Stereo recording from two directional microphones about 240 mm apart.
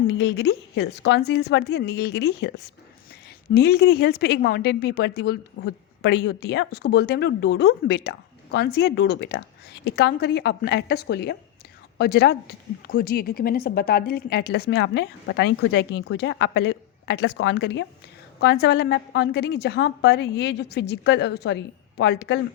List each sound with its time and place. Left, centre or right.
0.1 s a woman's voice: left
3.5 s a woman's voice: left